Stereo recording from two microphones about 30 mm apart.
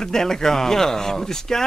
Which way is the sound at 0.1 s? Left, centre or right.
Centre.